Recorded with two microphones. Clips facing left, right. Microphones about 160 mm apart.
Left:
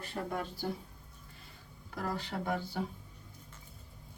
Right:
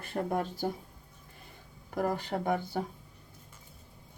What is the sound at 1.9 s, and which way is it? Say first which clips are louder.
Speech: right 6 dB; 50° right (ahead or behind).